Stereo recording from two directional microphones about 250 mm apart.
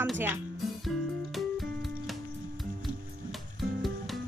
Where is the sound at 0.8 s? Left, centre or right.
Centre.